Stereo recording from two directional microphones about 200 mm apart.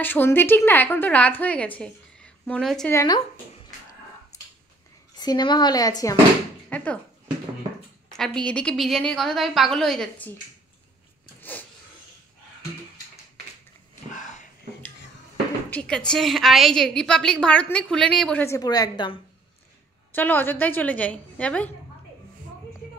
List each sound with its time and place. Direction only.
0.0 s a woman's voice: 10° left (ahead or behind)
1.8 s a sound: 5° left (ahead or behind)
2.9 s a woman's voice: 15° left (ahead or behind)
5.1 s speech: 20° left (ahead or behind)
6.7 s speech: 5° left (ahead or behind)
8.2 s a woman's voice: 5° left (ahead or behind)
14.1 s a sound: 40° left (ahead or behind)
15.7 s a woman's voice: 5° left (ahead or behind); by 19.1 s 20° left (ahead or behind)
20.1 s a woman's voice: 10° left (ahead or behind)